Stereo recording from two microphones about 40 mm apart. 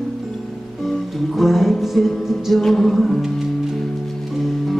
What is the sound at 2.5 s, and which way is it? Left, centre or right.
Music, centre.